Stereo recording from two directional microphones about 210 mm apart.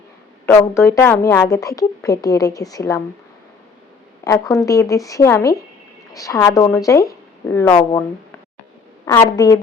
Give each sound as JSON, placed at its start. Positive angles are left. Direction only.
{"t": 0.4, "sound": "a woman's voice", "side_deg": 10}
{"t": 4.2, "sound": "a woman's voice", "side_deg": 15}
{"t": 9.0, "sound": "a woman's voice", "side_deg": 15}